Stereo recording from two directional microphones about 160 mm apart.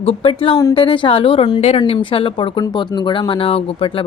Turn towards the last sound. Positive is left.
turn(degrees=35)  # may be behind; listen again after turning